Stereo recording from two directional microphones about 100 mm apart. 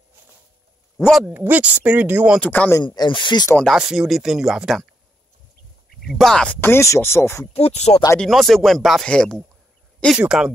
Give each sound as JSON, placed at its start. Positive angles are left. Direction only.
{"t": 1.3, "sound": "speech", "side_deg": -20}
{"t": 2.4, "sound": "speech", "side_deg": 15}
{"t": 2.8, "sound": "speech", "side_deg": 45}
{"t": 3.7, "sound": "speech", "side_deg": -5}
{"t": 6.0, "sound": "speech", "side_deg": 5}
{"t": 6.6, "sound": "speech", "side_deg": 25}
{"t": 7.5, "sound": "speech", "side_deg": 90}
{"t": 8.2, "sound": "speech", "side_deg": 0}
{"t": 10.1, "sound": "speech", "side_deg": -5}